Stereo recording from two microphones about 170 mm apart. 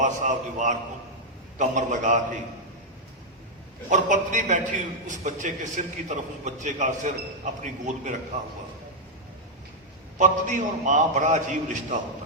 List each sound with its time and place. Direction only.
0.0 s a man's voice: 45° right (ahead or behind)
3.8 s a man's voice: 50° right (ahead or behind)
10.2 s a man's voice: 45° right (ahead or behind)